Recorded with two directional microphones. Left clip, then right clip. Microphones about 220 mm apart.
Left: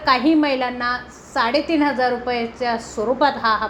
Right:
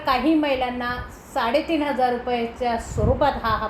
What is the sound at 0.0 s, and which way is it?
A woman's voice, 25° left (ahead or behind).